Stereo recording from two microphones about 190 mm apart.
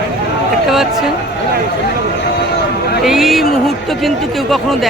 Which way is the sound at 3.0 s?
Centre (ahead or behind).